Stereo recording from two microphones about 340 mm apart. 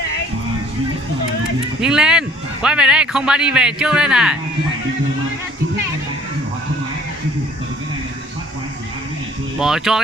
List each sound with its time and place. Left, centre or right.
1.8 s a man's voice: centre
9.6 s a man's voice: centre